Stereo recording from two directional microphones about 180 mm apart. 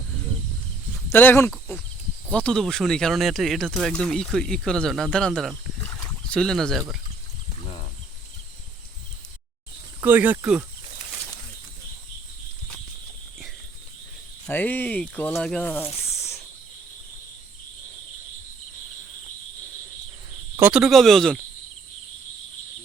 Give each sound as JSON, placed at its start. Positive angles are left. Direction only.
{"t": 1.1, "sound": "speech", "side_deg": 10}
{"t": 10.0, "sound": "speech", "side_deg": -10}
{"t": 14.4, "sound": "speech", "side_deg": 10}
{"t": 16.0, "sound": "snake", "side_deg": 15}
{"t": 20.6, "sound": "speech", "side_deg": -5}